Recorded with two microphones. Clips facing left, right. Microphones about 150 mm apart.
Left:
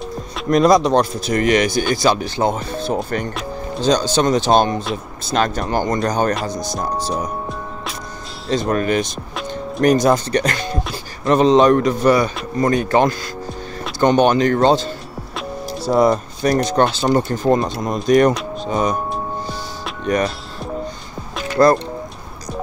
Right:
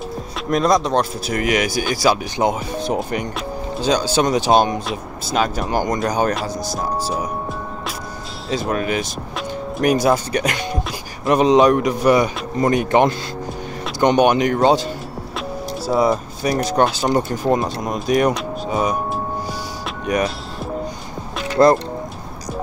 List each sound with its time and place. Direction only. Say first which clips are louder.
0.5 s speech: left 4 dB; centre (ahead or behind)
8.5 s speech: left 3 dB; 5° right (ahead or behind)
20.1 s speech: left 1 dB; 10° right (ahead or behind)
21.6 s speech: even; 20° right (ahead or behind)